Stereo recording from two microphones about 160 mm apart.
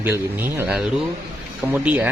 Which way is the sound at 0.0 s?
15° right (ahead or behind).